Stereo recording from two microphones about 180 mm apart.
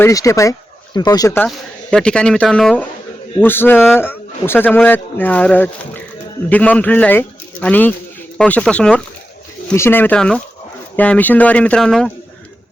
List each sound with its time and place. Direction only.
0.0 s a man's voice: 15° left (ahead or behind)
1.5 s a man's voice: 5° left (ahead or behind)